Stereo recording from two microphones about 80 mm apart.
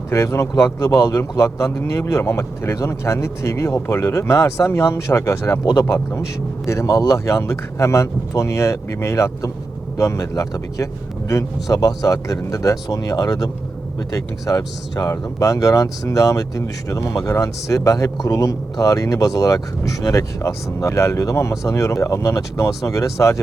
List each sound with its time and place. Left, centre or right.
0.1 s a man's voice: left